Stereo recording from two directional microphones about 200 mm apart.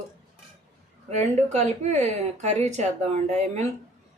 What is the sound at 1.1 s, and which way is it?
Speech, 35° right (ahead or behind).